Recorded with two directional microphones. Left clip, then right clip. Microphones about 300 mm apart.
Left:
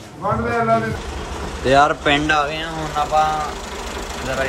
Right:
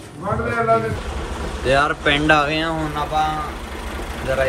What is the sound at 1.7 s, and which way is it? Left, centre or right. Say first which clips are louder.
Speech: left 3 dB; centre.